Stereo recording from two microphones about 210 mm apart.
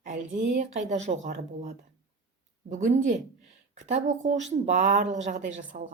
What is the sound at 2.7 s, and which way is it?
Speech, 35° right (ahead or behind).